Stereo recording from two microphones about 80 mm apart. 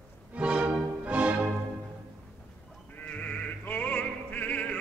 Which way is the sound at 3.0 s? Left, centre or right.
Centre.